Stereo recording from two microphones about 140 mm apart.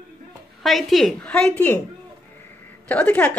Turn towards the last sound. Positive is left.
turn(degrees=10)  # may be behind; listen again after turning